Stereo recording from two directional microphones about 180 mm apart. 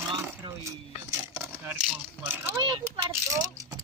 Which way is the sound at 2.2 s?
10° right (ahead or behind).